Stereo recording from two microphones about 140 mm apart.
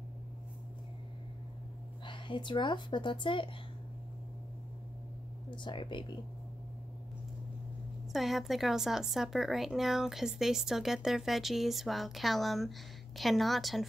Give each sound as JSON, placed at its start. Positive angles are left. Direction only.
{"t": 2.0, "sound": "speech", "side_deg": 35}
{"t": 5.5, "sound": "speech", "side_deg": 35}
{"t": 8.1, "sound": "speech", "side_deg": 0}